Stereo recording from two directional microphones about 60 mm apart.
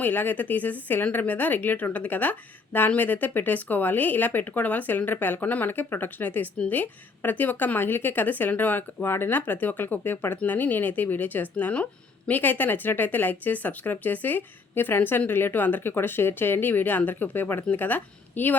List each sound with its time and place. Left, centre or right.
0.0 s a woman's voice: left
12.3 s a woman's voice: left